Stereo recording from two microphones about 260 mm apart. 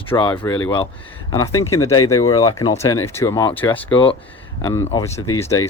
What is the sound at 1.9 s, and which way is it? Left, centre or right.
Speech, left.